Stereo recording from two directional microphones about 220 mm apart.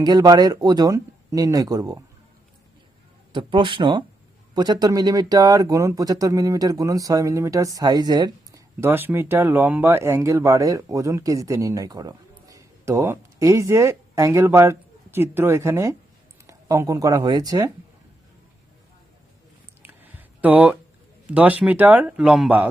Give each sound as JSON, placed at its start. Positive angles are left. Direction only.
{"t": 0.0, "sound": "speech", "side_deg": -15}
{"t": 3.3, "sound": "speech", "side_deg": -20}
{"t": 19.8, "sound": "a sound", "side_deg": -10}
{"t": 21.2, "sound": "speech", "side_deg": -5}